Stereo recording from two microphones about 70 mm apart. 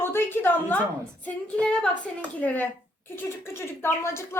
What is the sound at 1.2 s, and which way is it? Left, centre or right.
Speech, centre.